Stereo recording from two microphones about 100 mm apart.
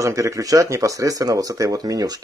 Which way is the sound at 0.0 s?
35° right (ahead or behind).